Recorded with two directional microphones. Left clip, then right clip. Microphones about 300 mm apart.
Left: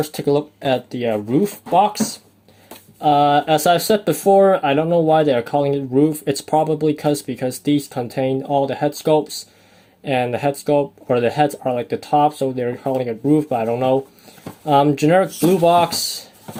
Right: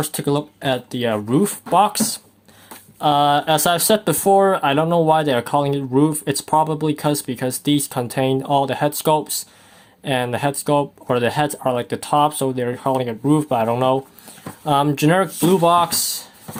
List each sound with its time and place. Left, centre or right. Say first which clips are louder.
0.9 s speech: even; centre